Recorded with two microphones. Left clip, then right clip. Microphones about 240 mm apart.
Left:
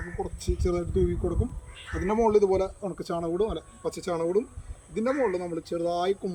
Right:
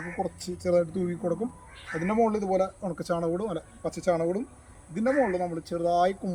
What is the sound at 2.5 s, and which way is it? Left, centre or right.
Speech, centre.